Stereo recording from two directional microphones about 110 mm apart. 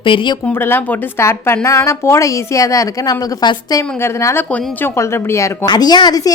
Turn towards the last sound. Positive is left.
turn(degrees=40)  # may be behind; listen again after turning